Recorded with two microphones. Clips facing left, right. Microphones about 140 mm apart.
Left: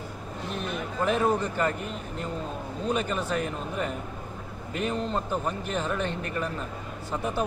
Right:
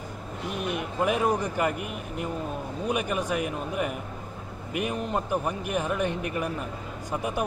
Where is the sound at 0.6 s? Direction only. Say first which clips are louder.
Right 2 dB; 15° right (ahead or behind).